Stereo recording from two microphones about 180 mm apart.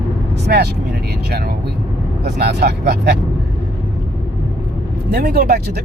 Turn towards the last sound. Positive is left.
turn(degrees=-60)  # may be behind; listen again after turning